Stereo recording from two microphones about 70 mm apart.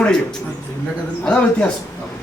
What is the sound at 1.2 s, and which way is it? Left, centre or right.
Speech, centre.